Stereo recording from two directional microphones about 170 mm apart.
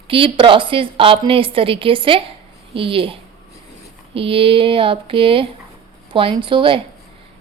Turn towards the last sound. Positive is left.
turn(degrees=-30)  # may be behind; listen again after turning